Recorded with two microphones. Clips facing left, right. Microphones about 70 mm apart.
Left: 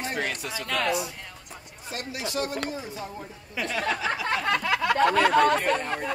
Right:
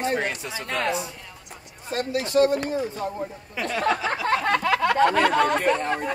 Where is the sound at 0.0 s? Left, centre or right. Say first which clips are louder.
Right 5 dB; right.